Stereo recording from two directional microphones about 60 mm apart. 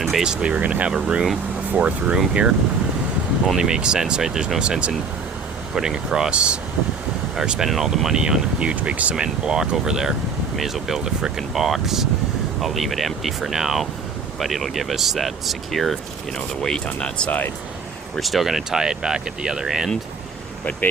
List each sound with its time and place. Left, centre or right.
0.2 s speech: centre
0.5 s speech: right
0.9 s speech: centre
8.7 s speech: right; by 16.0 s centre
16.6 s speech: centre
18.2 s speech: centre